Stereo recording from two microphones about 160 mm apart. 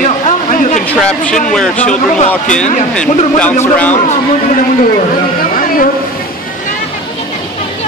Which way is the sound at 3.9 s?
50° left (ahead or behind).